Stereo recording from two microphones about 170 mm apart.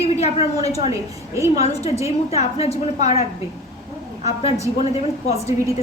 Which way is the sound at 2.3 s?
35° left (ahead or behind).